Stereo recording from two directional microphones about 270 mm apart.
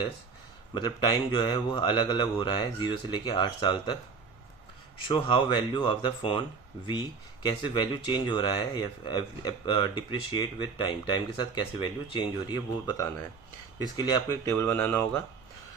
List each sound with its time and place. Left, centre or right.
0.7 s speech: centre
5.1 s speech: centre
7.4 s speech: centre